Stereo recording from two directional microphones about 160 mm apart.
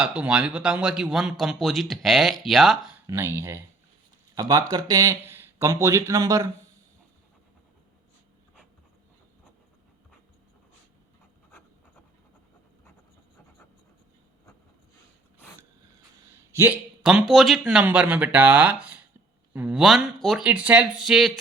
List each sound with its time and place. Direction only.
0.0 s speech: 10° right (ahead or behind)
3.1 s speech: 15° right (ahead or behind)
16.5 s a sound: 15° right (ahead or behind)
17.0 s speech: 5° right (ahead or behind)